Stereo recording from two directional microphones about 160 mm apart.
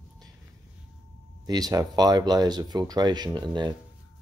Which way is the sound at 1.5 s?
25° right (ahead or behind).